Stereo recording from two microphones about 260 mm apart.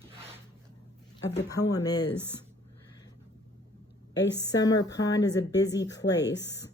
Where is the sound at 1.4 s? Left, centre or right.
Centre.